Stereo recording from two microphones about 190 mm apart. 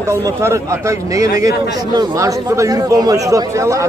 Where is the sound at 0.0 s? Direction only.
15° right (ahead or behind).